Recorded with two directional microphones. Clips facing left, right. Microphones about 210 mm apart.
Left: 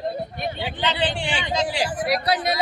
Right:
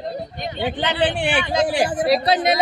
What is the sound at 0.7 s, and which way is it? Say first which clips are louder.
A man's voice: right 4 dB; 55° right (ahead or behind).